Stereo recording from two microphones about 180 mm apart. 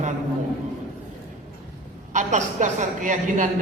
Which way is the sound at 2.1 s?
40° right (ahead or behind).